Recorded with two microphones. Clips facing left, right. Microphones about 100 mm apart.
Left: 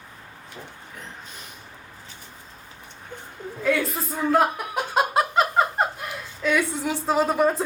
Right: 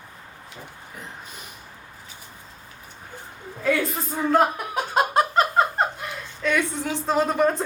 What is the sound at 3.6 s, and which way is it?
Chuckle, centre (ahead or behind).